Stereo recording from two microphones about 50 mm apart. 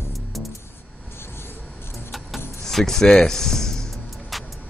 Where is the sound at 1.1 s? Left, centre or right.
Left.